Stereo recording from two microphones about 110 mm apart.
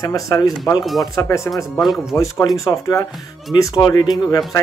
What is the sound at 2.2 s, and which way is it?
Speech, 30° left (ahead or behind).